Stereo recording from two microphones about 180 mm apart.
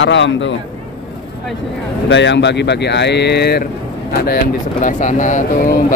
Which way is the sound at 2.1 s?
80° left.